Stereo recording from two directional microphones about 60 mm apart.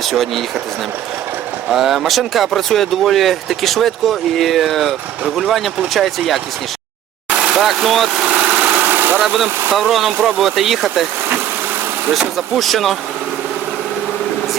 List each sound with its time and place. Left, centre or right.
0.0 s speech: centre
1.7 s speech: centre
7.5 s speech: centre
8.3 s engine: right
9.7 s speech: centre
12.5 s speech: centre